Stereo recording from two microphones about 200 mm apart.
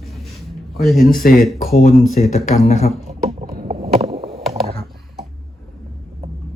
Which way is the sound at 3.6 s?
30° right (ahead or behind).